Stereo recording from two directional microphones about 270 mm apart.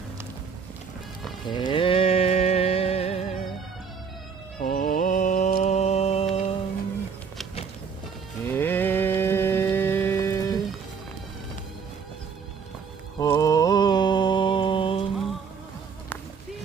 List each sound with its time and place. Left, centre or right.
1.5 s a sound: centre
4.6 s mantra: left
8.4 s music: centre
13.1 s mantra: centre